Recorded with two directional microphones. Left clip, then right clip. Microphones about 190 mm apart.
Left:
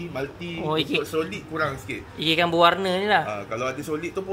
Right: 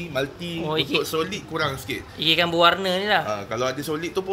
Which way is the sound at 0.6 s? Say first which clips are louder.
Right 1 dB; 15° left (ahead or behind).